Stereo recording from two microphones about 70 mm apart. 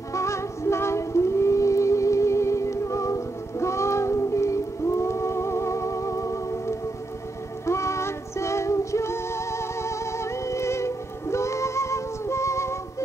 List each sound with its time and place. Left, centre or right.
0.1 s music: left